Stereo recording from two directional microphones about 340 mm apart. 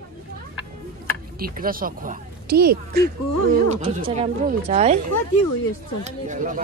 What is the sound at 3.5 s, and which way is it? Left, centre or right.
Speech, centre.